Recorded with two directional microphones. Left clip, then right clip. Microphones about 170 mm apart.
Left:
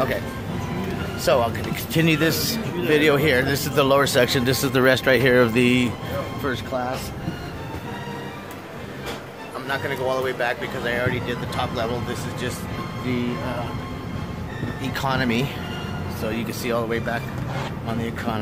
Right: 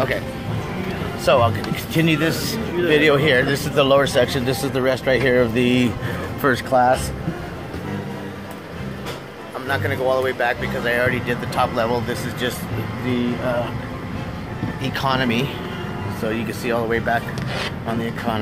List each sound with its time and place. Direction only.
1.2 s speech: 15° left (ahead or behind)
6.4 s speech: 25° right (ahead or behind)
9.7 s speech: 10° right (ahead or behind)
10.8 s speech: 15° right (ahead or behind)
15.0 s speech: 5° left (ahead or behind)